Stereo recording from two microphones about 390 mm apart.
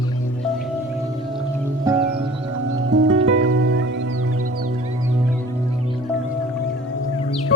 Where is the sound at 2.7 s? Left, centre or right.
Right.